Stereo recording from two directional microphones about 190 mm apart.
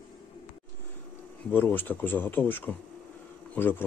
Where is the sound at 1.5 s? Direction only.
10° left (ahead or behind).